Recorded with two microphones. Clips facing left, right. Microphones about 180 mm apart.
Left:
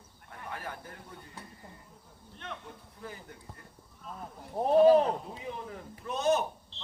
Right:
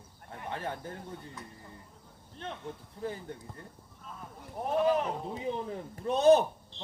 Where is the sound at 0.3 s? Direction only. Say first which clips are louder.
Right 4 dB; 25° right (ahead or behind).